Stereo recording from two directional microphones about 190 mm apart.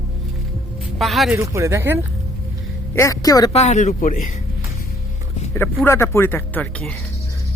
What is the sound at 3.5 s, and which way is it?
Speech, 35° left (ahead or behind).